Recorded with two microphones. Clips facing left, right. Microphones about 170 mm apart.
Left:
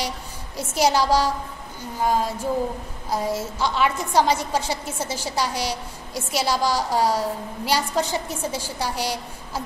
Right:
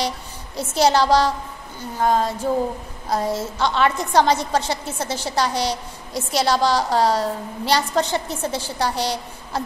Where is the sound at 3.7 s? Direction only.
10° left (ahead or behind).